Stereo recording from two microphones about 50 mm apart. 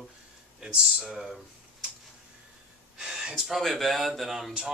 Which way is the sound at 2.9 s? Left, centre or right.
Centre.